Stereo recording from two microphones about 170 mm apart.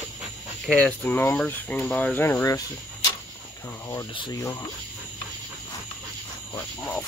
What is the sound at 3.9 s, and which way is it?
Speech, 20° left (ahead or behind).